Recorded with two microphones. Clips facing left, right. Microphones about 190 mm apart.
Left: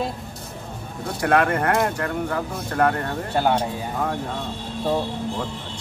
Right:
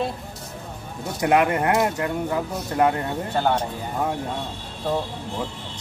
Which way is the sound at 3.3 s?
10° left (ahead or behind).